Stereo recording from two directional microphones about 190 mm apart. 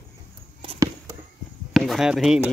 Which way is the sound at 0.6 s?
25° right (ahead or behind).